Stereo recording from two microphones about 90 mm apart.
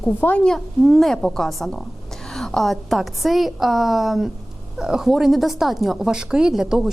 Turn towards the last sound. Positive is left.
turn(degrees=-5)  # may be behind; listen again after turning